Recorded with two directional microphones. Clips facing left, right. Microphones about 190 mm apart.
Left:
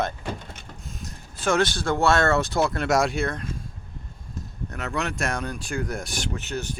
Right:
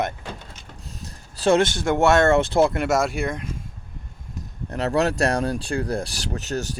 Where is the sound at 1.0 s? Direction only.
30° right (ahead or behind).